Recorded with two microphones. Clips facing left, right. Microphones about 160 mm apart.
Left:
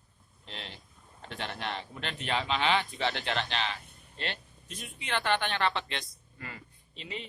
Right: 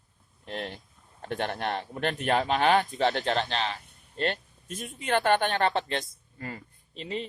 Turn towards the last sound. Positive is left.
turn(degrees=-40)  # may be behind; listen again after turning